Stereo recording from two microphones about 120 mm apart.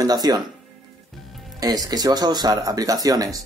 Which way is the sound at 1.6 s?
30° right (ahead or behind).